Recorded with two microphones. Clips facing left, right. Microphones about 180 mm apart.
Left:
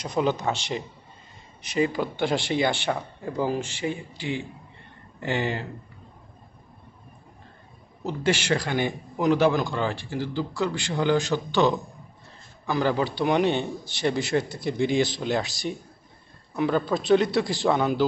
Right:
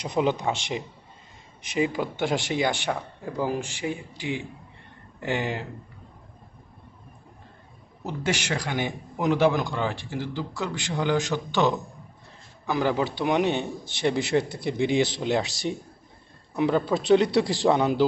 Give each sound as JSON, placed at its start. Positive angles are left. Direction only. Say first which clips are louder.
{"t": 0.0, "sound": "a man's voice", "louder": "even", "side_deg": -20}
{"t": 1.8, "sound": "a man's voice", "louder": "left 1 dB", "side_deg": -10}
{"t": 8.0, "sound": "a man's voice", "louder": "left 3 dB", "side_deg": -15}
{"t": 14.0, "sound": "a man's voice", "louder": "right 1 dB", "side_deg": -20}
{"t": 16.6, "sound": "a man's voice", "louder": "right 1 dB", "side_deg": -20}